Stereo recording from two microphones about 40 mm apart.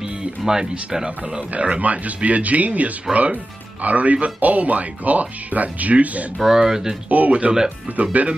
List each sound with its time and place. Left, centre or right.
0.4 s speech: centre
1.5 s speech: right
6.3 s speech: centre
6.6 s speech: centre
7.1 s speech: right